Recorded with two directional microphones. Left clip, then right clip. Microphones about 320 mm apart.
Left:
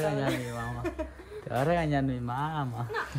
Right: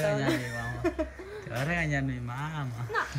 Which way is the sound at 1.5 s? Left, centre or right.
Centre.